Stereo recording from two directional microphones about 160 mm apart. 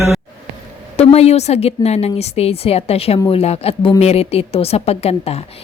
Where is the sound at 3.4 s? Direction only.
40° left (ahead or behind).